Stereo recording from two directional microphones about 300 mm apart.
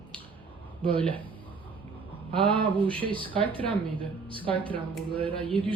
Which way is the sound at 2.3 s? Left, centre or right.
Centre.